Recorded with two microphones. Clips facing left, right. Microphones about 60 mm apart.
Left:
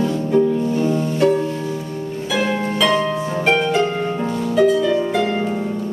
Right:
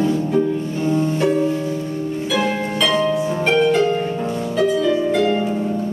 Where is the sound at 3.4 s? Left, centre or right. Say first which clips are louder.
Right 1 dB; centre.